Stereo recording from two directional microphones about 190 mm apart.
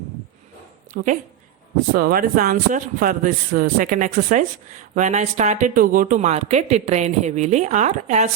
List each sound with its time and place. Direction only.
0.9 s a man's voice: 50° right (ahead or behind)